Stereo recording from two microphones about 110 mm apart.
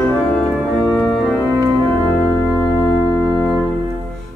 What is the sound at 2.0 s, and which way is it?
Organ, 15° left (ahead or behind).